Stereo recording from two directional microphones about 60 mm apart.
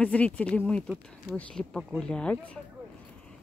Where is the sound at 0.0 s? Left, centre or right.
Left.